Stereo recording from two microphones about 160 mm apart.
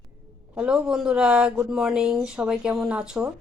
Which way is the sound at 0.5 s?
5° right (ahead or behind).